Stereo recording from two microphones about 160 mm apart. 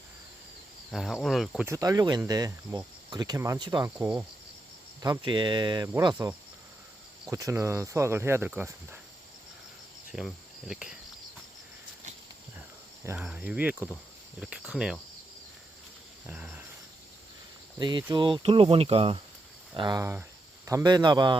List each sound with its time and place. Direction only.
0.9 s speech: centre (ahead or behind)
1.6 s speech: 20° right (ahead or behind)
4.9 s speech: 25° right (ahead or behind)
10.1 s cricket: 5° right (ahead or behind)
13.1 s speech: 5° right (ahead or behind)
13.7 s speech: 15° left (ahead or behind)
14.3 s speech: 5° right (ahead or behind)
16.2 s cricket: 10° right (ahead or behind)
17.7 s speech: 25° right (ahead or behind)
20.0 s speech: 15° right (ahead or behind)